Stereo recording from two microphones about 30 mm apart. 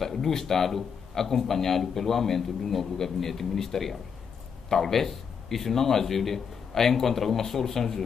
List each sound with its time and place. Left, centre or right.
0.0 s speech: centre